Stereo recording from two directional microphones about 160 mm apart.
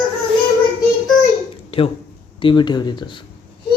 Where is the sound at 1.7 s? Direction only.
35° left (ahead or behind).